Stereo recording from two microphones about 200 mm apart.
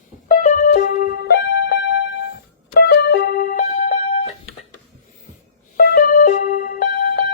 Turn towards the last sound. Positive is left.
turn(degrees=45)  # may be behind; listen again after turning